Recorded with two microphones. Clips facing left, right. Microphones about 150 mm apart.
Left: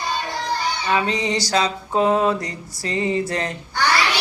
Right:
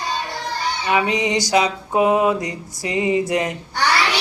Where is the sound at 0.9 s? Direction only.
15° right (ahead or behind).